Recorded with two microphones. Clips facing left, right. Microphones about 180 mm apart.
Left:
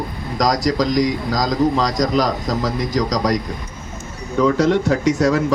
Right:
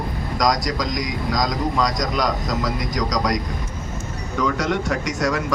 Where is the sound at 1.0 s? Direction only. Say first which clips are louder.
Left 4 dB; 30° left (ahead or behind).